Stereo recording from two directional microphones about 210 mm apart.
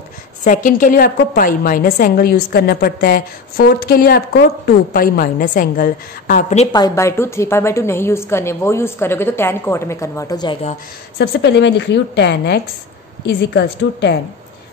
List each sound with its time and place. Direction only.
0.4 s a woman's voice: 35° left (ahead or behind)
6.7 s a woman's voice: 15° left (ahead or behind)
11.1 s a woman's voice: 55° left (ahead or behind)